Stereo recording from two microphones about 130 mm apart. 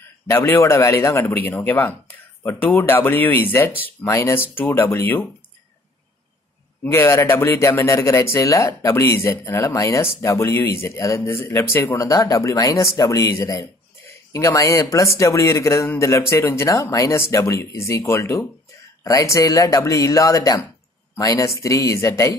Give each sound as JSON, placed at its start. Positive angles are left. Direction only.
{"t": 0.3, "sound": "speech", "side_deg": 20}
{"t": 6.8, "sound": "speech", "side_deg": 20}